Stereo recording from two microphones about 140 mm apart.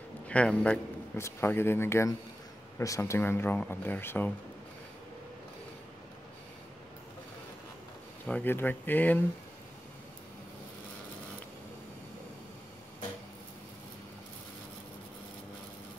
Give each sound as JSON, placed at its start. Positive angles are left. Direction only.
{"t": 0.3, "sound": "speech", "side_deg": 10}
{"t": 8.3, "sound": "speech", "side_deg": 15}